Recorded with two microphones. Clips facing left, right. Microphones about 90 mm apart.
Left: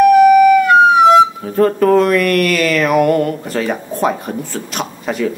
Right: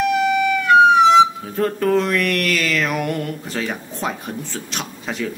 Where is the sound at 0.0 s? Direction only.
5° left (ahead or behind).